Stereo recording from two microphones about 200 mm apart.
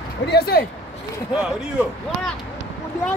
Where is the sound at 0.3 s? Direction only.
50° left (ahead or behind).